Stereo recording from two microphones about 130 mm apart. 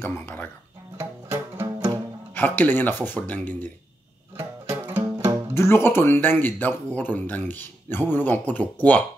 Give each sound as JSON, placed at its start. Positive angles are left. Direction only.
{"t": 0.0, "sound": "speech", "side_deg": 15}
{"t": 0.9, "sound": "music", "side_deg": -20}
{"t": 2.3, "sound": "speech", "side_deg": 15}
{"t": 4.4, "sound": "music", "side_deg": -20}
{"t": 5.5, "sound": "speech", "side_deg": 20}